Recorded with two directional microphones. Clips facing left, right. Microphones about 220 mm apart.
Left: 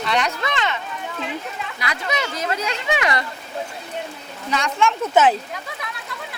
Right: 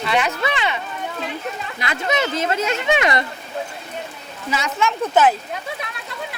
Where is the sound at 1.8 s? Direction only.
25° right (ahead or behind).